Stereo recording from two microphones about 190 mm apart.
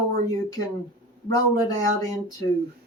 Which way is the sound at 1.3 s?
20° left (ahead or behind).